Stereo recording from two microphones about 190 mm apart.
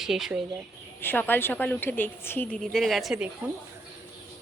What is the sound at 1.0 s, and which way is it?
A woman's voice, 10° left (ahead or behind).